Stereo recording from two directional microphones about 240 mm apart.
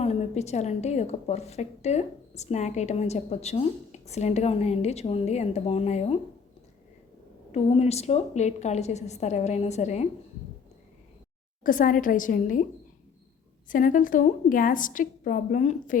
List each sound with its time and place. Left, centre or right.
0.0 s a woman's voice: left
7.5 s a woman's voice: left
11.6 s a woman's voice: left
13.7 s a woman's voice: left